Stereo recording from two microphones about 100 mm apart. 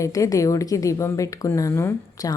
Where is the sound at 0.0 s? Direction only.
35° left (ahead or behind).